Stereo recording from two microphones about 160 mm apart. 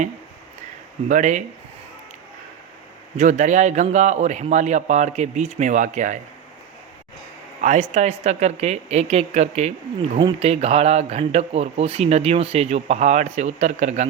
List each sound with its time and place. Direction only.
1.0 s a man's voice: 50° right (ahead or behind)
3.2 s a man's voice: 50° right (ahead or behind)
7.6 s a man's voice: 50° right (ahead or behind)